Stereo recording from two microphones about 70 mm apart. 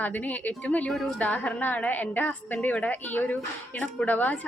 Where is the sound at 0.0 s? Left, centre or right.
Left.